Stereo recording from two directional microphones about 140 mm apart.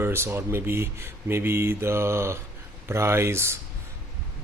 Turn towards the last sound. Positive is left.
turn(degrees=-20)  # may be behind; listen again after turning